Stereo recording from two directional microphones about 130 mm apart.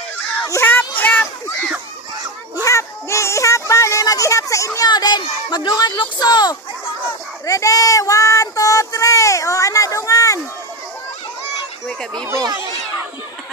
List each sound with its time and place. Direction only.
0.5 s speech: 15° left (ahead or behind)
2.6 s speech: 20° left (ahead or behind)
12.3 s speech: 25° right (ahead or behind)